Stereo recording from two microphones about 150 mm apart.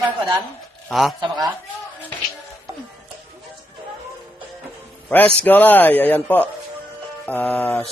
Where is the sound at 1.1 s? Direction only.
30° right (ahead or behind).